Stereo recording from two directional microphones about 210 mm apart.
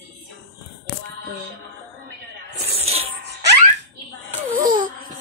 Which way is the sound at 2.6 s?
30° right (ahead or behind).